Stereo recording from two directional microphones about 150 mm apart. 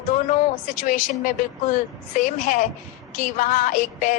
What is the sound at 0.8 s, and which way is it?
A woman's voice, 60° left (ahead or behind).